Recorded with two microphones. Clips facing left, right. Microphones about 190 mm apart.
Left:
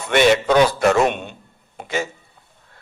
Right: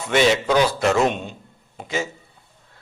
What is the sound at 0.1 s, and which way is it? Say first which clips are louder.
A man's voice: left 3 dB; 60° left (ahead or behind).